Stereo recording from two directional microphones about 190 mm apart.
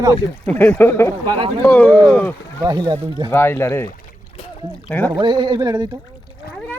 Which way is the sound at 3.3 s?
10° left (ahead or behind).